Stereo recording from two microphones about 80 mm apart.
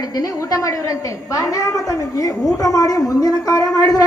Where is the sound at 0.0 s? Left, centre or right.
Left.